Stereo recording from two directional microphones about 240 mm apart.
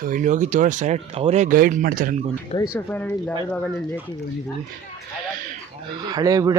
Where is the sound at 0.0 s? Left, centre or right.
Right.